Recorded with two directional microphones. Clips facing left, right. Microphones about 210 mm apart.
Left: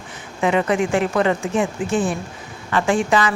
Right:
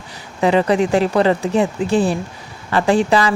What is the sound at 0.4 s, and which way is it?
A woman's voice, 35° right (ahead or behind).